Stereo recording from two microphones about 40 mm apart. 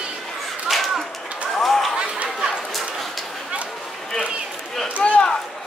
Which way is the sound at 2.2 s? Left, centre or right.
Centre.